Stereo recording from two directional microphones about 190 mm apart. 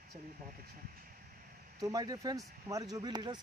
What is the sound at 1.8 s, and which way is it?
Speech, 20° right (ahead or behind).